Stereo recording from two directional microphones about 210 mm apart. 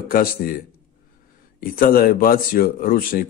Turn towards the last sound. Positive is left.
turn(degrees=45)  # may be behind; listen again after turning